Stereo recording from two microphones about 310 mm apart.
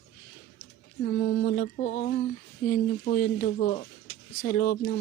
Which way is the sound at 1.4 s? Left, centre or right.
Left.